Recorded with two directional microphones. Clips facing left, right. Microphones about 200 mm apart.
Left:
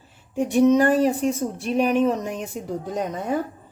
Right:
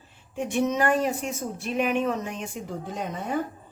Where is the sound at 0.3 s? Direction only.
40° left (ahead or behind).